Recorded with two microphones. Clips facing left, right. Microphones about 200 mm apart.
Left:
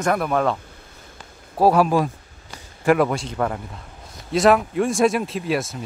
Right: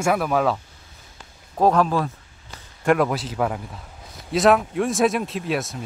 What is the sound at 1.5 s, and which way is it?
Speech, 10° left (ahead or behind).